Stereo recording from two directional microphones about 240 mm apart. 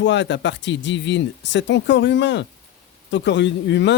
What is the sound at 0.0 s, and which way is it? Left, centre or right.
Speech, left.